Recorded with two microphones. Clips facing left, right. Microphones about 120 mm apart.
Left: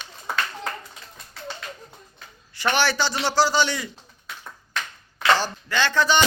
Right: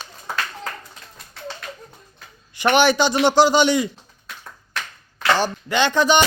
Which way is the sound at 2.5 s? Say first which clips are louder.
Right 6 dB; 15° right (ahead or behind).